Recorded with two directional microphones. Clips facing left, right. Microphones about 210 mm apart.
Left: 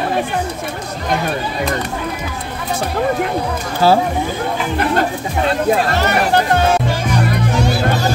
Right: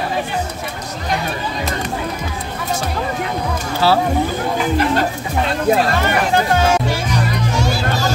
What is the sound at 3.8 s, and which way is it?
Speech, 45° left (ahead or behind).